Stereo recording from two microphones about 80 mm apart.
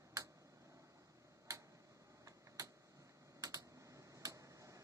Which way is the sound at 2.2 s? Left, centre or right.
Right.